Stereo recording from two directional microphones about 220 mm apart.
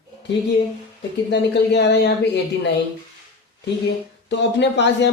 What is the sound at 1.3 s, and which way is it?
Speech, 50° left (ahead or behind).